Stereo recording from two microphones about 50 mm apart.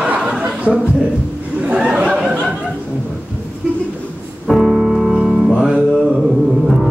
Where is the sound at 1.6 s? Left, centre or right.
Right.